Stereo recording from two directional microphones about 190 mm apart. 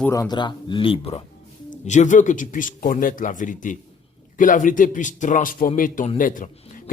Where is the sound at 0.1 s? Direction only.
20° left (ahead or behind).